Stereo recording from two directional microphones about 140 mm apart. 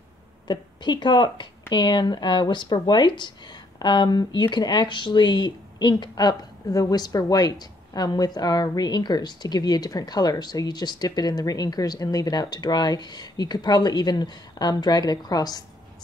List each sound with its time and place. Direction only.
0.5 s speech: 30° left (ahead or behind)